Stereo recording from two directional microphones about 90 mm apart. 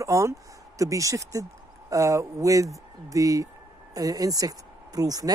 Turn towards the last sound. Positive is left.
turn(degrees=-45)  # may be behind; listen again after turning